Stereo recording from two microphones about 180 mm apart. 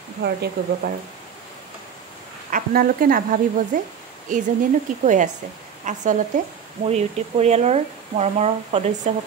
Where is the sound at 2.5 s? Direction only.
50° right (ahead or behind).